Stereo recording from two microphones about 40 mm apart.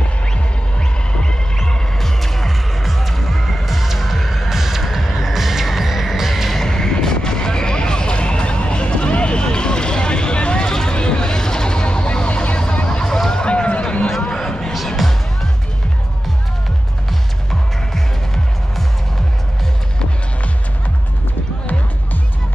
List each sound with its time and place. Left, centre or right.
0.7 s music: left
2.0 s music: centre
3.6 s music: centre
6.5 s a sound: centre
10.7 s vehicle: centre
13.3 s a sound: left
17.5 s music: centre